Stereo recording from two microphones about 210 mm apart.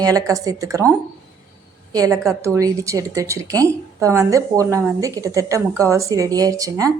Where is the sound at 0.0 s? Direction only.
15° right (ahead or behind).